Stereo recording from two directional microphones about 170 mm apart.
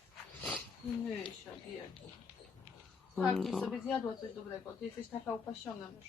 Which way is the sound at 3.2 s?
5° left (ahead or behind).